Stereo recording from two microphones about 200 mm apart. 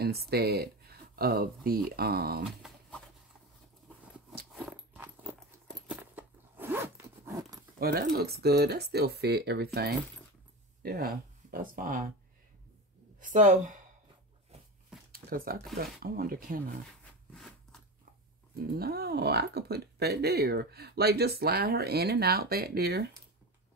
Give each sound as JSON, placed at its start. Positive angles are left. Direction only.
{"t": 0.0, "sound": "speech", "side_deg": -50}
{"t": 4.5, "sound": "a sound", "side_deg": 0}
{"t": 5.8, "sound": "zipper", "side_deg": -5}
{"t": 7.8, "sound": "speech", "side_deg": -50}
{"t": 10.8, "sound": "speech", "side_deg": -50}
{"t": 13.2, "sound": "speech", "side_deg": -40}
{"t": 15.1, "sound": "speech", "side_deg": -45}
{"t": 17.3, "sound": "a sound", "side_deg": 5}
{"t": 18.6, "sound": "speech", "side_deg": -50}